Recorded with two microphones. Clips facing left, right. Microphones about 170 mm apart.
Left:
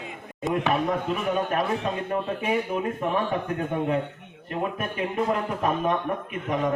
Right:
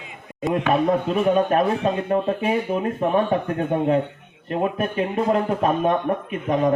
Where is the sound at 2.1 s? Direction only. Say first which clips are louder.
Right 3 dB; 30° right (ahead or behind).